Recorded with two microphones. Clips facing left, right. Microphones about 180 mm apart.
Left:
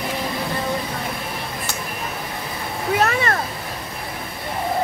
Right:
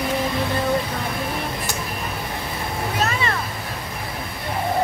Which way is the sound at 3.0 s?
55° left (ahead or behind).